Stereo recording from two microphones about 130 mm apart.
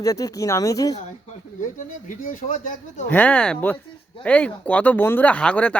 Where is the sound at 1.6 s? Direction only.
90° left.